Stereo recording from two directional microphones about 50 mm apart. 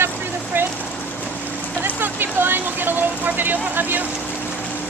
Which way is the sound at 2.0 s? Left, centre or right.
Right.